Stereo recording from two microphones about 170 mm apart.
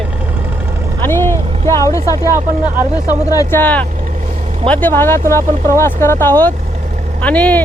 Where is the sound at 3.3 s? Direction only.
15° left (ahead or behind).